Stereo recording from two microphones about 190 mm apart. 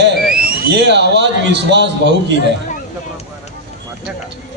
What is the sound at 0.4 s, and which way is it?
A man's voice, 60° right (ahead or behind).